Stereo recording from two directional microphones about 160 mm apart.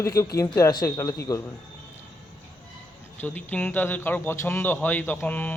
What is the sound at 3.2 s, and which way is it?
Speech, 10° left (ahead or behind).